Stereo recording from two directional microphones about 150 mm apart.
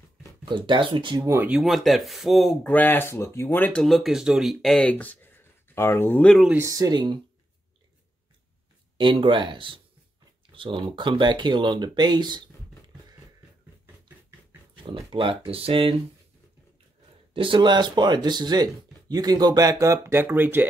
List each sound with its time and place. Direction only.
0.5 s speech: 30° right (ahead or behind)
1.5 s speech: centre (ahead or behind)
6.5 s speech: 20° right (ahead or behind)
8.9 s speech: 35° right (ahead or behind)
14.8 s speech: 35° right (ahead or behind)
17.3 s speech: 35° right (ahead or behind); by 20.6 s 15° right (ahead or behind)